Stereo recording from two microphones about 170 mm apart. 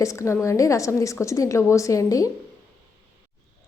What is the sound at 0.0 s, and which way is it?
A woman's voice, 15° left (ahead or behind).